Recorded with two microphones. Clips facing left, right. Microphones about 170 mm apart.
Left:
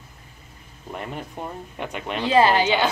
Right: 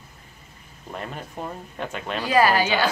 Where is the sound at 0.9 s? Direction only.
15° left (ahead or behind).